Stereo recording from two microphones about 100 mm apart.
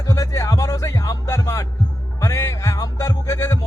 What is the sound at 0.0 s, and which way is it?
Music, 35° left (ahead or behind).